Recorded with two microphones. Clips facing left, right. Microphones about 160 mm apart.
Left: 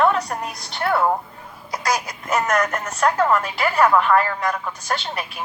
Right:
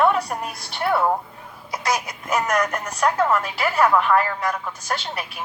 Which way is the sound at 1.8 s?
25° right (ahead or behind).